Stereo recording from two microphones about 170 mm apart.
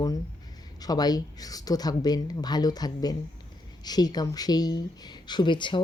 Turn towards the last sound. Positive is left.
turn(degrees=30)  # may be behind; listen again after turning